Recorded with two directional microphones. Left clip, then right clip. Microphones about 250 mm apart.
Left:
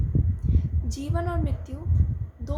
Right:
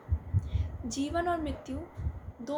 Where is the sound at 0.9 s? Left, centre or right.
Centre.